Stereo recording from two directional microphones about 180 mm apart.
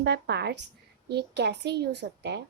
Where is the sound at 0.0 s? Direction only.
65° right (ahead or behind).